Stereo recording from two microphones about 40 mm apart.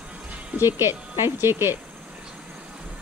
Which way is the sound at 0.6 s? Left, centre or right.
Right.